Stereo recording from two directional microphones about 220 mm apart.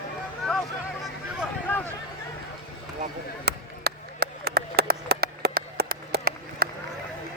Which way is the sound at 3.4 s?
45° right (ahead or behind).